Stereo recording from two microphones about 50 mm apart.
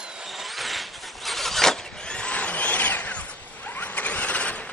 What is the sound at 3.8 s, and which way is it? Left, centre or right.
Vehicle, left.